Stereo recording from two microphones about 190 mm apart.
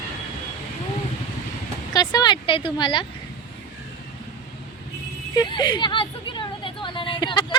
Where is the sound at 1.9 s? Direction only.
20° left (ahead or behind).